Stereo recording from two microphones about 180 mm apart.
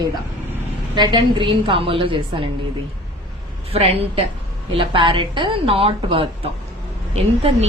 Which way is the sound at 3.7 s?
35° right (ahead or behind).